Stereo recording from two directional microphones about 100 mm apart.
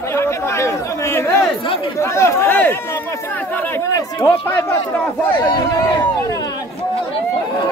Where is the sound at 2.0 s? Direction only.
30° left (ahead or behind).